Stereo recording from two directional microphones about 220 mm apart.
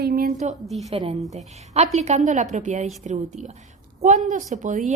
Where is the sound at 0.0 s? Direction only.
45° right (ahead or behind).